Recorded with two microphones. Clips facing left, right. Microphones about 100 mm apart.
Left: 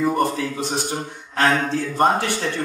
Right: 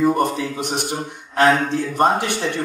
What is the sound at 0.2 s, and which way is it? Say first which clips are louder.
A man's voice: right 1 dB; 20° right (ahead or behind).